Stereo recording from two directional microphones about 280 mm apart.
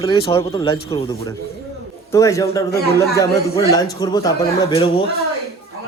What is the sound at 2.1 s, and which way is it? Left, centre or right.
A man's voice, centre.